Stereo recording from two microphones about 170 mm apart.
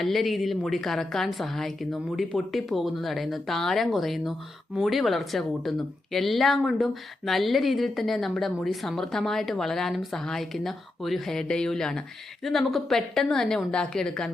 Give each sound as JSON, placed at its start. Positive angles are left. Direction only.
{"t": 0.0, "sound": "a woman's voice", "side_deg": 0}